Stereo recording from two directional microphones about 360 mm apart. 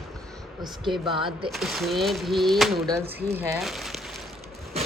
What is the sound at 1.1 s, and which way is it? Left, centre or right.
Speech, centre.